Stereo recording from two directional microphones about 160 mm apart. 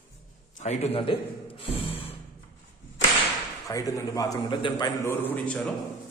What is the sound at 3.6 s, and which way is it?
A man's voice, 20° left (ahead or behind).